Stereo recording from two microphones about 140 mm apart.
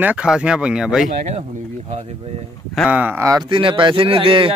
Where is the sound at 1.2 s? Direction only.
50° right (ahead or behind).